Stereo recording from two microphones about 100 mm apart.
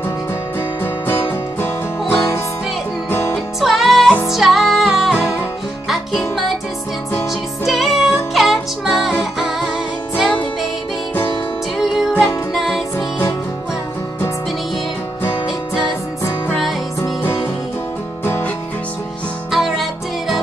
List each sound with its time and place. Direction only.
1.0 s music: 25° left (ahead or behind)
3.6 s music: centre (ahead or behind)
7.6 s music: centre (ahead or behind)
12.5 s music: centre (ahead or behind)
17.0 s music: 25° left (ahead or behind)
19.5 s music: centre (ahead or behind)